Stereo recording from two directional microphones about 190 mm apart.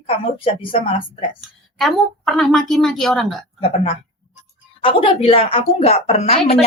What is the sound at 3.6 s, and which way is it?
A woman's voice, 30° left (ahead or behind).